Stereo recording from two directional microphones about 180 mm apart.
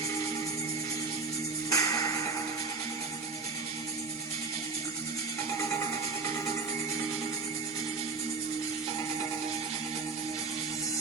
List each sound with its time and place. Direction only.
1.7 s music: 20° left (ahead or behind)